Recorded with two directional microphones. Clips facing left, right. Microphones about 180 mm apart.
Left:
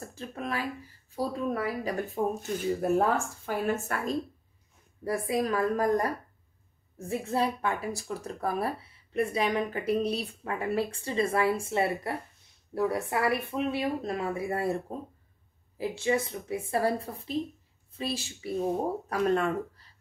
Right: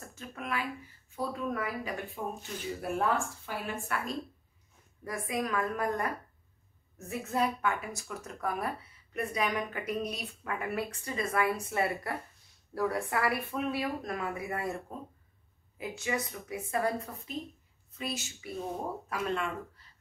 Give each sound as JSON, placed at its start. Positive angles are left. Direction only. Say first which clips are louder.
{"t": 0.0, "sound": "speech", "louder": "left 5 dB", "side_deg": 30}
{"t": 15.8, "sound": "speech", "louder": "left 6 dB", "side_deg": 30}